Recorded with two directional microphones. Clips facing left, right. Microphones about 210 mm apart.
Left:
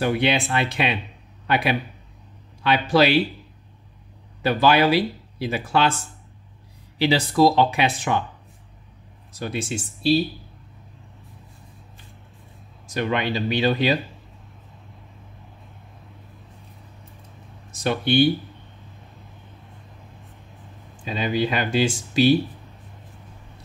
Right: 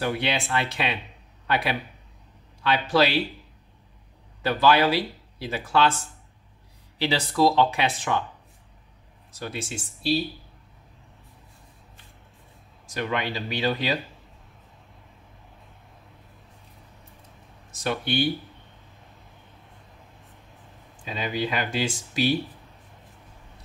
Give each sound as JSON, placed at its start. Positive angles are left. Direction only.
{"t": 0.0, "sound": "speech", "side_deg": 15}
{"t": 4.4, "sound": "speech", "side_deg": 15}
{"t": 7.0, "sound": "speech", "side_deg": 10}
{"t": 9.3, "sound": "speech", "side_deg": 20}
{"t": 12.8, "sound": "speech", "side_deg": 25}
{"t": 17.6, "sound": "speech", "side_deg": 25}
{"t": 21.0, "sound": "speech", "side_deg": 30}